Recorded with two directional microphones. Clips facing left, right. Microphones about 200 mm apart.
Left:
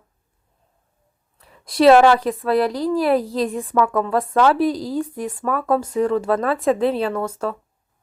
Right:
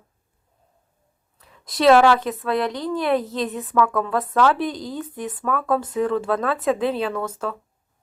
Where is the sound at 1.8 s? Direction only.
Centre (ahead or behind).